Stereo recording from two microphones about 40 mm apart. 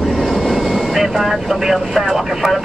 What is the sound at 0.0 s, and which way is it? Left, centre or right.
Speech, centre.